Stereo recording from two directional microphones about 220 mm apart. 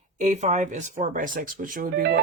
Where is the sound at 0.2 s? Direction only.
30° right (ahead or behind).